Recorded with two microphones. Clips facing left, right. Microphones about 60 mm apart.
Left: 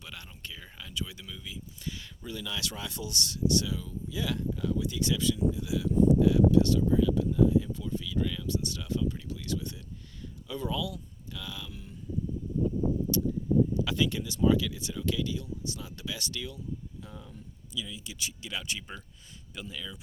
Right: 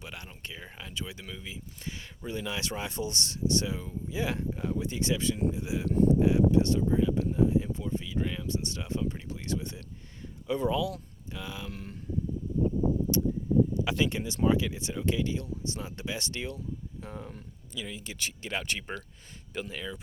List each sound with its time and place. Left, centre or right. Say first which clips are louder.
0.0 s speech: right 2 dB; right
11.7 s speech: right 5 dB; right
13.8 s speech: right 1 dB; right